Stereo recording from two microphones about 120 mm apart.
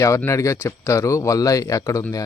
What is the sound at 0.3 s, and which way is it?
Speech, 25° left (ahead or behind).